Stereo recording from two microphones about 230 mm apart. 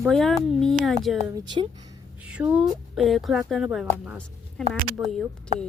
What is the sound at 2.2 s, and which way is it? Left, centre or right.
A woman's voice, centre.